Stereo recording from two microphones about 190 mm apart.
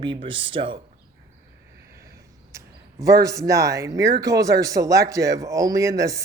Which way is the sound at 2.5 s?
15° right (ahead or behind).